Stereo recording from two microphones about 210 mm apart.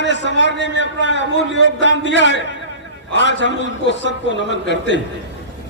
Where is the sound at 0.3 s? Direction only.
60° left (ahead or behind).